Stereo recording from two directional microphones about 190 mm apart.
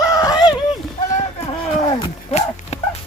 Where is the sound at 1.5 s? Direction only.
30° left (ahead or behind).